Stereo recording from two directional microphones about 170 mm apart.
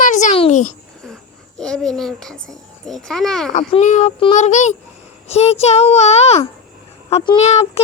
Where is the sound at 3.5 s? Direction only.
45° left (ahead or behind).